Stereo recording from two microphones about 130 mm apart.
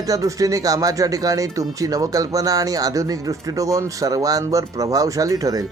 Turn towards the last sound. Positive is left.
turn(degrees=-25)  # may be behind; listen again after turning